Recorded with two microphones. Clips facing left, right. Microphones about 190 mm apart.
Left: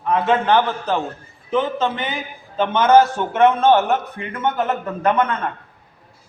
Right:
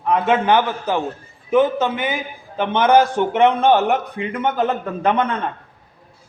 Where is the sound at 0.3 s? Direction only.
15° right (ahead or behind).